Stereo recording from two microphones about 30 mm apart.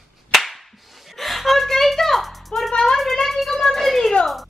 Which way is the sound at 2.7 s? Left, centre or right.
Left.